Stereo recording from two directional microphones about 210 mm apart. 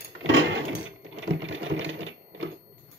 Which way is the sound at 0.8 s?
65° right (ahead or behind).